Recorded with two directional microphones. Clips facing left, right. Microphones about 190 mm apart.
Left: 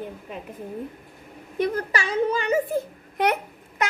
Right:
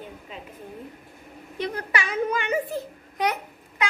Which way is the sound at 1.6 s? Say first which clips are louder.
Left 4 dB; 45° left (ahead or behind).